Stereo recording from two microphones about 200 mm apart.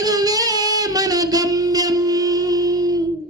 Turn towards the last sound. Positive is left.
turn(degrees=-20)  # may be behind; listen again after turning